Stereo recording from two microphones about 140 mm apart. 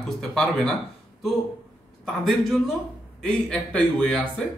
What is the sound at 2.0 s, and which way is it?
A man's voice, centre (ahead or behind).